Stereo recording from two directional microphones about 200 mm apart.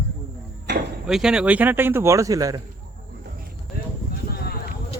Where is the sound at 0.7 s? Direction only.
55° right (ahead or behind).